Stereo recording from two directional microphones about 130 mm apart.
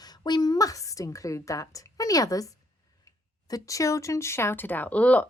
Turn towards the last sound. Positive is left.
turn(degrees=10)  # may be behind; listen again after turning